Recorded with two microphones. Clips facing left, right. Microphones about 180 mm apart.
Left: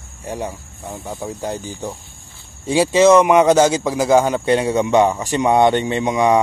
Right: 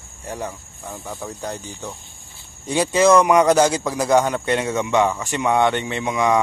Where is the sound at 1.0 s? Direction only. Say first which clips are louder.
Left 4 dB; 25° left (ahead or behind).